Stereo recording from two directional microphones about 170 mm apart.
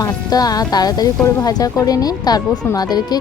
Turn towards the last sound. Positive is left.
turn(degrees=25)  # may be behind; listen again after turning